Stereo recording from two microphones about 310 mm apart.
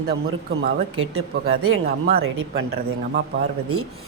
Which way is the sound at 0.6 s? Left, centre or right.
Right.